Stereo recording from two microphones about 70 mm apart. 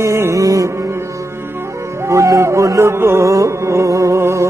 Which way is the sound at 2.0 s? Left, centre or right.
Right.